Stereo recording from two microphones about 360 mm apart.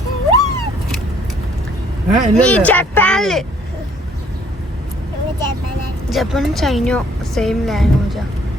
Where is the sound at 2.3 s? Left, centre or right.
Centre.